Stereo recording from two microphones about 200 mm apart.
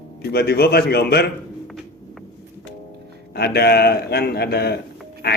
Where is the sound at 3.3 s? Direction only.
55° left (ahead or behind).